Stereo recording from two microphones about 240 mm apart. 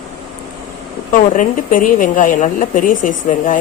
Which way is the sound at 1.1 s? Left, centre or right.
Left.